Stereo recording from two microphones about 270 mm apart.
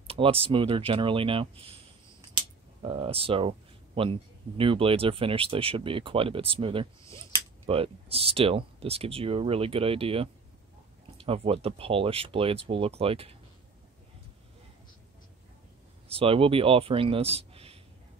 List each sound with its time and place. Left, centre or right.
0.0 s speech: right
2.8 s speech: centre
16.1 s speech: right